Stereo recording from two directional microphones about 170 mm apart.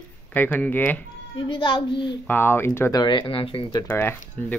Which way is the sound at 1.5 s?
30° left (ahead or behind).